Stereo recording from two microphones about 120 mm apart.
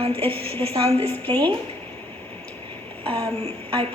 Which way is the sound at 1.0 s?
15° left (ahead or behind).